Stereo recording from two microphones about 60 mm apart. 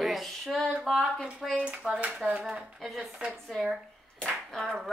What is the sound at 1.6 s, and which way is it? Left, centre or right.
Speech, right.